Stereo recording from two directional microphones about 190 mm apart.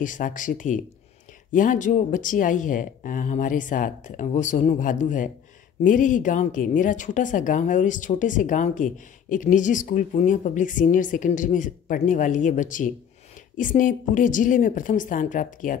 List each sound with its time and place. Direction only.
0.0 s a woman's voice: 45° left (ahead or behind)